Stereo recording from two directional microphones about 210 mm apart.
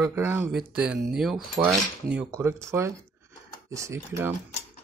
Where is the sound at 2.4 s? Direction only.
10° right (ahead or behind).